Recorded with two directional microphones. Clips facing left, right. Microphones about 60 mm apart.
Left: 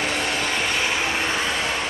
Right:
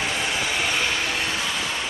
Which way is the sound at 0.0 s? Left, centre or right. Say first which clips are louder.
Left 1 dB; left.